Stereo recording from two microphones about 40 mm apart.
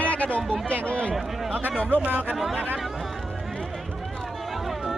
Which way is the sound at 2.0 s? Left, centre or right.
Right.